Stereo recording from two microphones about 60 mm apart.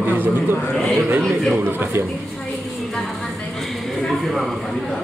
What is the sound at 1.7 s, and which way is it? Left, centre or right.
Speech, right.